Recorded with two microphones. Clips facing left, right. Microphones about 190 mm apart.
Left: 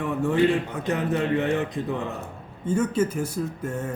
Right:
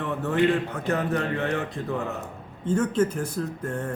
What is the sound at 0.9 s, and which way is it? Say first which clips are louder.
Speech: left 2 dB; 15° left (ahead or behind).